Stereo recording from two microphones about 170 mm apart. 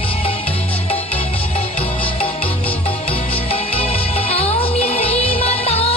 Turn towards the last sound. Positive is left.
turn(degrees=35)  # may be behind; listen again after turning